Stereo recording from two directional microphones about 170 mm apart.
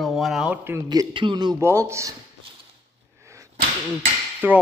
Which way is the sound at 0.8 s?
25° right (ahead or behind).